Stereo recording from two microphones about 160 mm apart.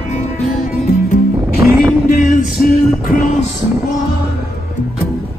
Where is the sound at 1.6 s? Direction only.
20° right (ahead or behind).